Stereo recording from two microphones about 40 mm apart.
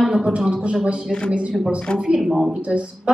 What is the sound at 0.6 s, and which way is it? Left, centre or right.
Speech, right.